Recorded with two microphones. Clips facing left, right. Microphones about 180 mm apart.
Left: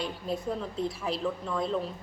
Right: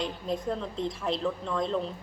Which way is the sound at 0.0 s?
5° left (ahead or behind).